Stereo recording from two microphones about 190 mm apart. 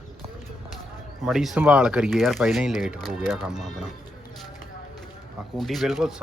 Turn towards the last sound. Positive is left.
turn(degrees=0)  # may be behind; listen again after turning